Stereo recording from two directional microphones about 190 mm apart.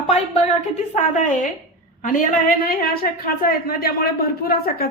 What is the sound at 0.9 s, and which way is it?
A woman's voice, 40° left (ahead or behind).